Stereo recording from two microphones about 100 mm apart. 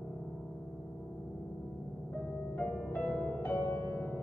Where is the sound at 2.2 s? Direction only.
10° left (ahead or behind).